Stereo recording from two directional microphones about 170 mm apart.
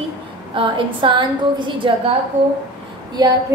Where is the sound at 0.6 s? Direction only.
30° right (ahead or behind).